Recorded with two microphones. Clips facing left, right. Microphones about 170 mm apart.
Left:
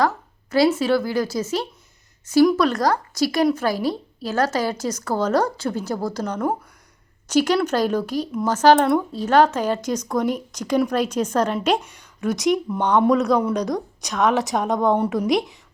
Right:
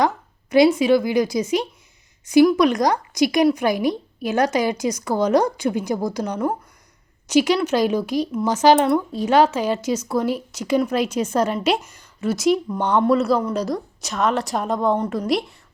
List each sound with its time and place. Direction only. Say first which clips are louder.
0.5 s a woman's voice: right 3 dB; 15° right (ahead or behind)
14.9 s a woman's voice: left 2 dB; 10° left (ahead or behind)